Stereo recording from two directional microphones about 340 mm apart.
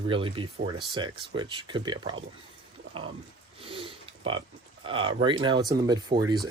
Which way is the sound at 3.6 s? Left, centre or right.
Centre.